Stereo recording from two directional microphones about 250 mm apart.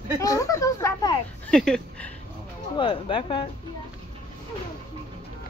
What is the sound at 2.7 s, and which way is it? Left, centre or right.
Speech, centre.